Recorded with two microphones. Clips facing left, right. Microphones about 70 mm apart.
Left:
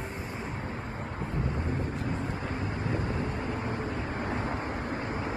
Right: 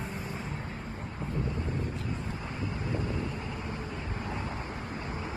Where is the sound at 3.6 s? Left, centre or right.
Left.